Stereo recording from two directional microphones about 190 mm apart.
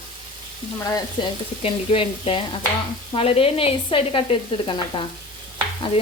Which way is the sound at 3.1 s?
30° left (ahead or behind).